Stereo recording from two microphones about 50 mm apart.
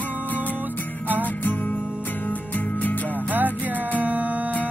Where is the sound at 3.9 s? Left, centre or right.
Right.